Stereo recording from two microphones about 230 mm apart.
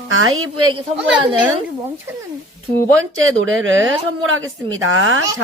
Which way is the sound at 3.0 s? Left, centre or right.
Right.